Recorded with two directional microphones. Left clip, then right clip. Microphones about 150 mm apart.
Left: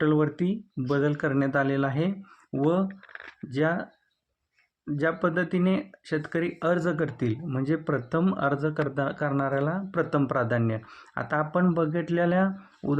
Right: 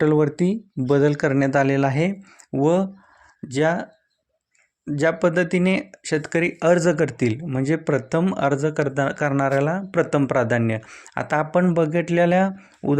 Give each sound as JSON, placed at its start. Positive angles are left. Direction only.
{"t": 0.0, "sound": "speech", "side_deg": -40}
{"t": 3.5, "sound": "speech", "side_deg": -25}
{"t": 4.9, "sound": "speech", "side_deg": -30}